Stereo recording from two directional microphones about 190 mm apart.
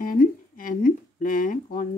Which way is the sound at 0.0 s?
50° left (ahead or behind).